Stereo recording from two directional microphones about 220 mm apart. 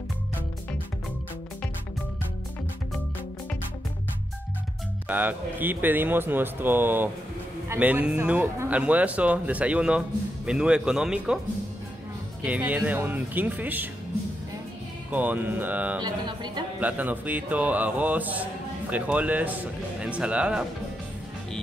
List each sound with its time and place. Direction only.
5.0 s a man's voice: 10° right (ahead or behind)
12.4 s speech: 5° right (ahead or behind)
15.0 s speech: 10° right (ahead or behind)
16.0 s speech: 20° right (ahead or behind)
16.8 s speech: 5° right (ahead or behind)